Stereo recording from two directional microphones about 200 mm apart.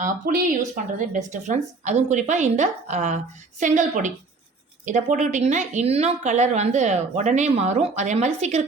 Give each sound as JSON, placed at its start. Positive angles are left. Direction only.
{"t": 0.0, "sound": "a woman's voice", "side_deg": -45}